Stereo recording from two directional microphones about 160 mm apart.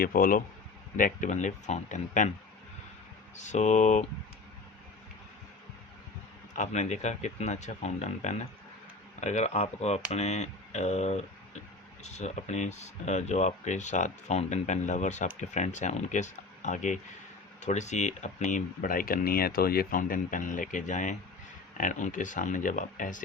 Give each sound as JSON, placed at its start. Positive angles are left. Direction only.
{"t": 0.0, "sound": "speech", "side_deg": 65}
{"t": 3.3, "sound": "speech", "side_deg": 50}
{"t": 6.5, "sound": "speech", "side_deg": 50}